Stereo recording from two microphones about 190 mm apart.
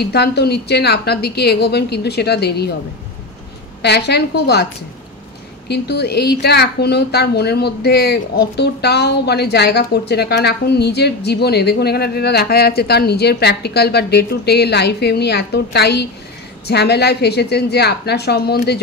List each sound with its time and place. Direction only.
0.0 s a woman's voice: 60° left (ahead or behind)
3.8 s a woman's voice: 60° left (ahead or behind)
5.7 s a woman's voice: 60° left (ahead or behind)